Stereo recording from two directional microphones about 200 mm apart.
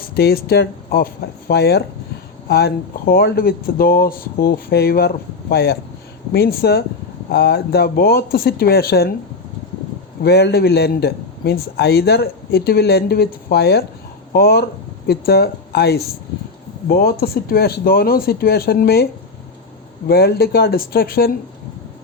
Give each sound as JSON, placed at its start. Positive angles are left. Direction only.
{"t": 0.1, "sound": "a man's voice", "side_deg": 50}
{"t": 10.2, "sound": "a man's voice", "side_deg": 55}
{"t": 20.1, "sound": "a man's voice", "side_deg": 50}